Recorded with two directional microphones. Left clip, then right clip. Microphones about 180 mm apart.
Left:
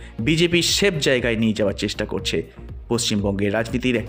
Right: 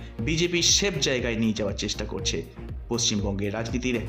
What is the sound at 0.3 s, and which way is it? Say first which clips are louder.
A man's voice: left 4 dB; 30° left (ahead or behind).